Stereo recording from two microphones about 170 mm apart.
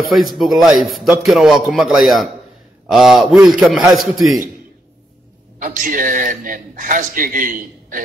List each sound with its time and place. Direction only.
0.2 s a man's voice: centre (ahead or behind)
5.6 s a man's voice: 50° right (ahead or behind)